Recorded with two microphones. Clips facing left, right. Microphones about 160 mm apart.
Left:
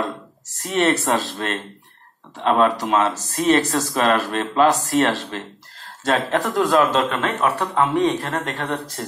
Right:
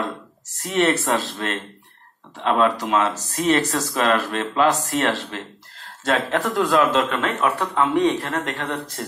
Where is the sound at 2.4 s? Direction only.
40° left (ahead or behind).